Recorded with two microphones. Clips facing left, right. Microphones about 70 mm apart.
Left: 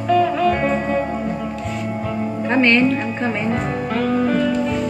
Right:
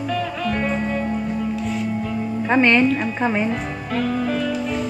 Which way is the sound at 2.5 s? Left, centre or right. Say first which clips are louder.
Even; centre.